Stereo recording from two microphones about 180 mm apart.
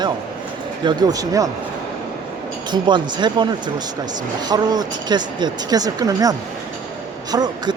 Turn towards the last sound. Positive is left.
turn(degrees=-20)  # may be behind; listen again after turning